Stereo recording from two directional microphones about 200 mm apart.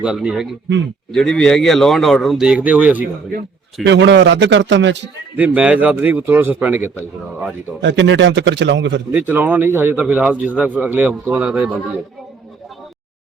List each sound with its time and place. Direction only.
0.0 s a man's voice: 5° right (ahead or behind)
3.8 s a man's voice: 60° right (ahead or behind)
5.4 s a man's voice: 5° right (ahead or behind)
7.8 s a man's voice: 65° right (ahead or behind)
9.1 s a man's voice: 10° right (ahead or behind)